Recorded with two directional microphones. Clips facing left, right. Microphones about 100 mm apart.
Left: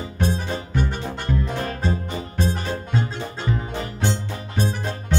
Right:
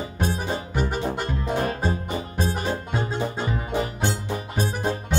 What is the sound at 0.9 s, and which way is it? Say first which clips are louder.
Music: even; 15° right (ahead or behind).